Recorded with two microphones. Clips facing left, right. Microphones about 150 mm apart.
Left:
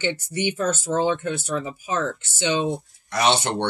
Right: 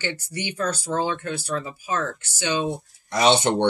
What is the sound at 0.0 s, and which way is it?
Speech, 20° left (ahead or behind).